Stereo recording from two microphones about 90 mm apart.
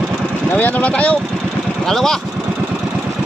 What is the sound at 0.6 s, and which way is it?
Speech, 15° left (ahead or behind).